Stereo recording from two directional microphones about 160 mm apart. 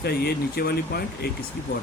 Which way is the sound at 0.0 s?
85° left.